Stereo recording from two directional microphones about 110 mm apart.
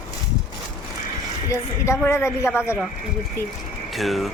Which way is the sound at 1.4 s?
25° left (ahead or behind).